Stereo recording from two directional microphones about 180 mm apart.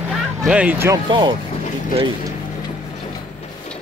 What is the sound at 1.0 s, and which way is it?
Speech, 25° right (ahead or behind).